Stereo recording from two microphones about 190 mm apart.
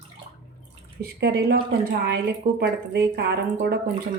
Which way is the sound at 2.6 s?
60° right (ahead or behind).